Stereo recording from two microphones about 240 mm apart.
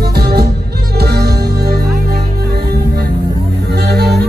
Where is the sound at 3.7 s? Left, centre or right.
Right.